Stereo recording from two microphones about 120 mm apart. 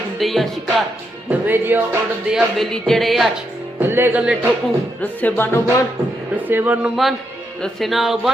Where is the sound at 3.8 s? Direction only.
20° right (ahead or behind).